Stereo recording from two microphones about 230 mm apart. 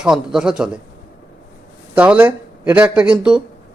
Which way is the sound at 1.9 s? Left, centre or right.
Centre.